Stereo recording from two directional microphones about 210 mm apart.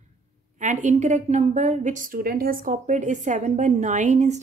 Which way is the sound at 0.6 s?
35° right (ahead or behind).